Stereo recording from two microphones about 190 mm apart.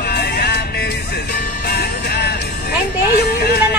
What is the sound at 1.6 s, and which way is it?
Music, 55° left (ahead or behind).